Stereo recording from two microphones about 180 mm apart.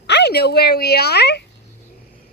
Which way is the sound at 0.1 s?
70° left (ahead or behind).